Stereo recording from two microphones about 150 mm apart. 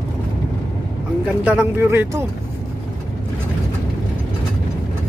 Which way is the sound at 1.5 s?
15° right (ahead or behind).